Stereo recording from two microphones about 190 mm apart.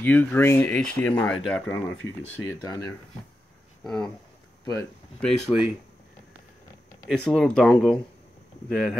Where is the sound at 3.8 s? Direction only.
5° left (ahead or behind).